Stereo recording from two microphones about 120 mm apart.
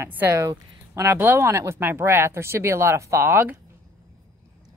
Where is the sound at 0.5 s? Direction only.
30° right (ahead or behind).